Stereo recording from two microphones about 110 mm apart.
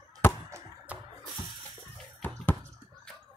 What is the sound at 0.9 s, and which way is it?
Music, 10° right (ahead or behind).